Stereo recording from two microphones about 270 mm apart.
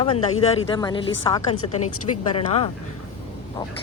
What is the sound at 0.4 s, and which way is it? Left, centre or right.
A man's voice, left.